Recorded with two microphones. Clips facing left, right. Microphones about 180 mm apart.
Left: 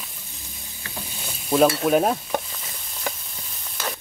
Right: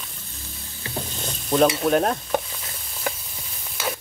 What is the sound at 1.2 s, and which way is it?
Stir, 5° left (ahead or behind).